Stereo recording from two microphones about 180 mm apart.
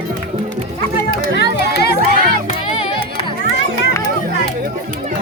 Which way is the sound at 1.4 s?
65° left (ahead or behind).